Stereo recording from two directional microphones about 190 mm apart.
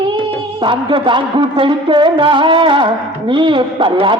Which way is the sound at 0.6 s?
25° right (ahead or behind).